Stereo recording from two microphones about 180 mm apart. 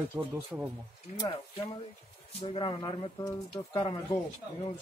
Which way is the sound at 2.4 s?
30° left (ahead or behind).